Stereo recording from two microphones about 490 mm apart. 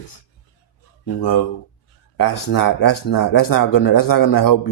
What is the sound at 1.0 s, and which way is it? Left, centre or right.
A man's voice, left.